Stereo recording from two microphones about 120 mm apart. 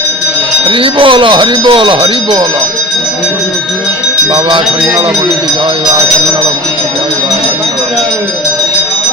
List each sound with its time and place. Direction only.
0.7 s speech: 45° right (ahead or behind)